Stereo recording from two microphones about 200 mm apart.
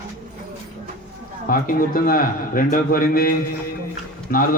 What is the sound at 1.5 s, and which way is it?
A man's voice, 45° left (ahead or behind).